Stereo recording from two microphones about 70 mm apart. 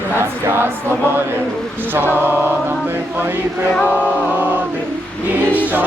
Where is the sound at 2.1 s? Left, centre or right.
Right.